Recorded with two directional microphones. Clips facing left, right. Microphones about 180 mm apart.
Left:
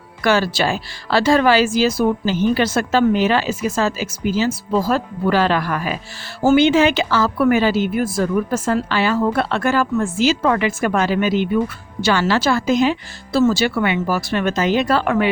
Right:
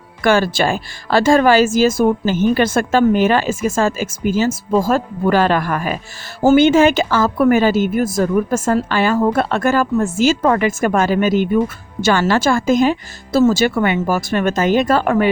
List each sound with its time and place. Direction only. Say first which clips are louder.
0.2 s a woman's voice: right 3 dB; 50° right (ahead or behind)